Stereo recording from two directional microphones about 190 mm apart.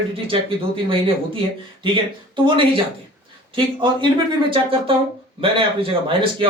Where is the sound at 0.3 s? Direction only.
25° right (ahead or behind).